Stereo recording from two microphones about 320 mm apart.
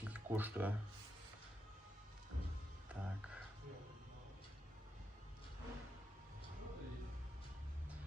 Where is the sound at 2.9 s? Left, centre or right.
Centre.